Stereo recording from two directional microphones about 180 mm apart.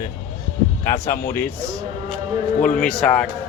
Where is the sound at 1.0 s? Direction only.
15° left (ahead or behind).